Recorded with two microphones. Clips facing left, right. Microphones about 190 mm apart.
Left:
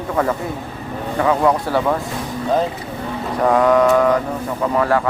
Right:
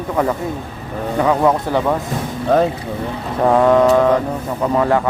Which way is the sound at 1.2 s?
20° right (ahead or behind).